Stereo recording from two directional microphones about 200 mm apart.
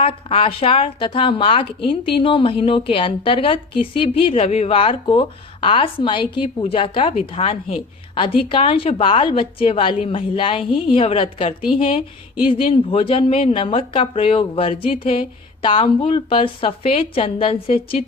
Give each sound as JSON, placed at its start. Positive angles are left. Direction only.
{"t": 0.0, "sound": "a woman's voice", "side_deg": 25}